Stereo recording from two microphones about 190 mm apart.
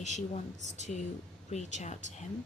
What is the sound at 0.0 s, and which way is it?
Speech, 40° left (ahead or behind).